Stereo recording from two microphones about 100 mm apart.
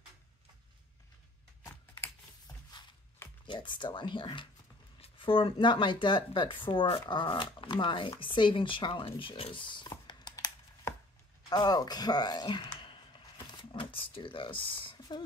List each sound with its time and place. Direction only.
1.6 s typing: 25° left (ahead or behind)
3.4 s speech: 50° left (ahead or behind)